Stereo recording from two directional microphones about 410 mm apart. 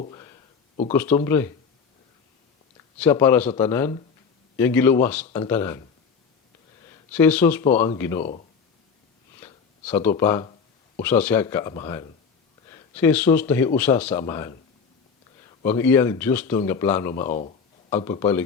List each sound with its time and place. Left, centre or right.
0.0 s speech: centre
3.0 s speech: centre
7.1 s speech: centre
9.4 s a sound: centre
11.0 s speech: centre
15.6 s speech: centre
17.2 s a sound: centre
18.0 s speech: centre